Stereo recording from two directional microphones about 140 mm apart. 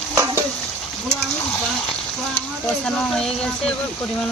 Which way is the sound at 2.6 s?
5° left (ahead or behind).